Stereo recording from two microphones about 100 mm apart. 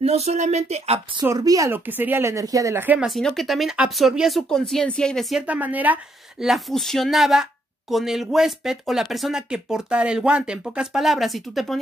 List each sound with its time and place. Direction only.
0.0 s speech: 90° right
1.2 s speech: 35° right (ahead or behind)
1.7 s speech: 20° right (ahead or behind)
3.0 s speech: centre (ahead or behind)
5.5 s a woman's voice: 15° right (ahead or behind)
6.4 s speech: centre (ahead or behind)